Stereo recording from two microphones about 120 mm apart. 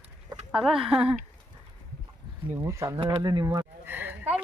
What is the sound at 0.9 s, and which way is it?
Speech, 50° right (ahead or behind).